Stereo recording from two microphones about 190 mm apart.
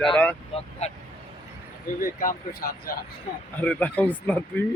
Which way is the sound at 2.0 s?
50° left (ahead or behind).